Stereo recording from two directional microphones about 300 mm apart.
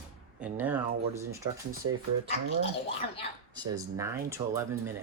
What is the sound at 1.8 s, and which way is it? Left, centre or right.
Speech, right.